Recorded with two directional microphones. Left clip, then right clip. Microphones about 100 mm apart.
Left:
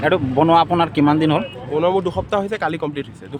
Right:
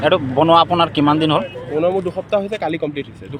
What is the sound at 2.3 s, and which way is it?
Speech, 90° left.